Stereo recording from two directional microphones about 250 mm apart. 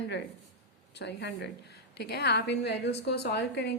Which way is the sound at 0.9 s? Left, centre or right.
Left.